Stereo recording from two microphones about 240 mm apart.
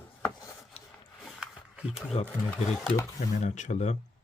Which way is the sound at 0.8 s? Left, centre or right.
Left.